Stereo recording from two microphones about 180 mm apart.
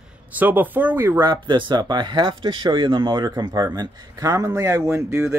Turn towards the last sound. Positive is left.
turn(degrees=-15)  # may be behind; listen again after turning